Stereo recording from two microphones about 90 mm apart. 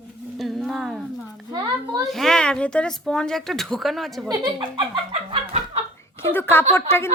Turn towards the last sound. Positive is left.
turn(degrees=30)  # may be behind; listen again after turning